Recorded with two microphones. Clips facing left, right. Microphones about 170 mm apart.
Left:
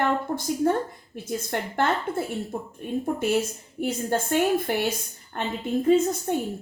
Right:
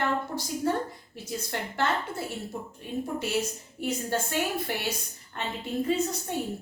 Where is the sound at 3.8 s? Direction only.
50° left (ahead or behind).